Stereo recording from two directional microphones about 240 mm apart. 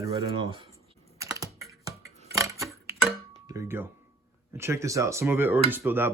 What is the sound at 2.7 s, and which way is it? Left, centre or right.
Tick-tock, centre.